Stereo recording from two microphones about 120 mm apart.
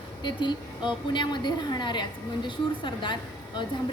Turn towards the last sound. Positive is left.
turn(degrees=40)  # may be behind; listen again after turning